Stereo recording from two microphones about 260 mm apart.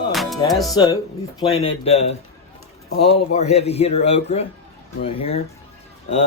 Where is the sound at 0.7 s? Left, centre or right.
Centre.